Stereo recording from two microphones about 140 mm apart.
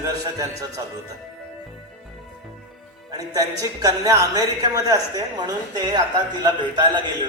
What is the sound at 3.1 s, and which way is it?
A man's voice, 25° right (ahead or behind).